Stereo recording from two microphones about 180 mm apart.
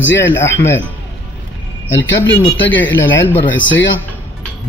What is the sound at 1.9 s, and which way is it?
Speech, 90° left.